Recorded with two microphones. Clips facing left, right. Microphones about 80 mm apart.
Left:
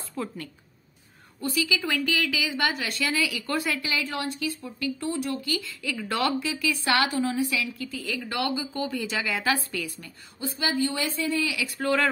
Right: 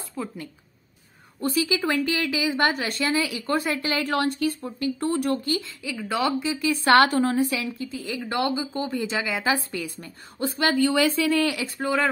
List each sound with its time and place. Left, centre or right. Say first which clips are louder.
0.2 s a woman's voice: even; centre
1.5 s speech: right 4 dB; right
4.0 s speech: right 6 dB; right
4.6 s speech: right 4 dB; right
5.1 s speech: right 5 dB; right
5.5 s a woman's voice: right 3 dB; right
5.9 s a woman's voice: right 2 dB; centre
6.4 s a woman's voice: right 3 dB; right
6.7 s a woman's voice: right 8 dB; right
10.4 s speech: right 5 dB; right
11.8 s a woman's voice: right 1 dB; centre